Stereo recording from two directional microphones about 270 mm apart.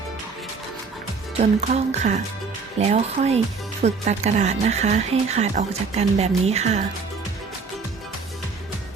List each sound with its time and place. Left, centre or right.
1.4 s speech: right